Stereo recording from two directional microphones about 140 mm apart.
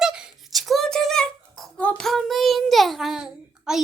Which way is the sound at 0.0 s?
5° right (ahead or behind).